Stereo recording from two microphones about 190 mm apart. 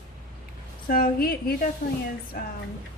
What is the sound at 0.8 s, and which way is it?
A woman's voice, 50° left (ahead or behind).